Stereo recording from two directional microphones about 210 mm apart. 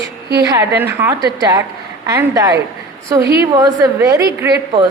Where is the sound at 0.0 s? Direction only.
50° right (ahead or behind).